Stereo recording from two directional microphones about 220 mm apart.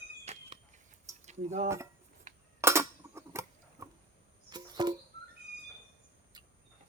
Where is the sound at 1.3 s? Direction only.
30° right (ahead or behind).